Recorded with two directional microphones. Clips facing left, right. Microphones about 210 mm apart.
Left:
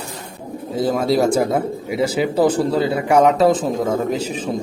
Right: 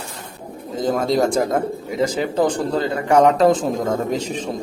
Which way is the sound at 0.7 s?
5° left (ahead or behind).